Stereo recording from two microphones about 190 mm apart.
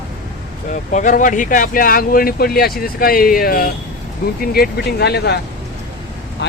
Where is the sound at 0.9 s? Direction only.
40° left (ahead or behind); by 5.4 s 60° left (ahead or behind).